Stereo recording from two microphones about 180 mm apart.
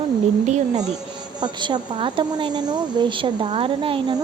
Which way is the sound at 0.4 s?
40° right (ahead or behind).